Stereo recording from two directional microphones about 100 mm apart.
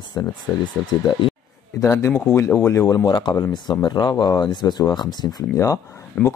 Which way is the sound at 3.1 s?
45° left (ahead or behind).